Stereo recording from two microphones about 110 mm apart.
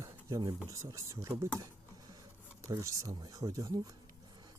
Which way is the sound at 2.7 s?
30° right (ahead or behind).